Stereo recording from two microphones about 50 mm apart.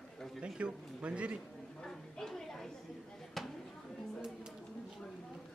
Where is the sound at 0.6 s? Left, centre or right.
Right.